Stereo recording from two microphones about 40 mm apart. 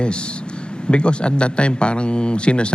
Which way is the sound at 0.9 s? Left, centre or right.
Left.